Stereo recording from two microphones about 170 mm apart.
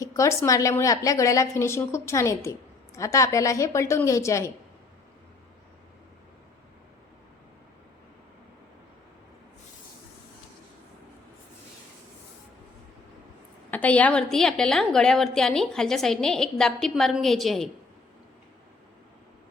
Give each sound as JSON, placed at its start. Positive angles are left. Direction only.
{"t": 0.0, "sound": "a woman's voice", "side_deg": 20}
{"t": 13.7, "sound": "a woman's voice", "side_deg": 10}